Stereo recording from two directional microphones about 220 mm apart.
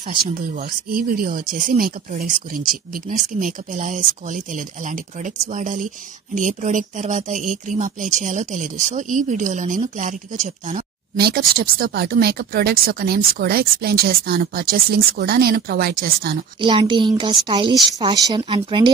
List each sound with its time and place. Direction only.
0.1 s speech: 35° right (ahead or behind)
16.6 s speech: 20° right (ahead or behind)